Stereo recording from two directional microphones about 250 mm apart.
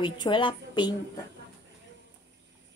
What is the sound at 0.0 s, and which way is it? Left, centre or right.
A woman's voice, centre.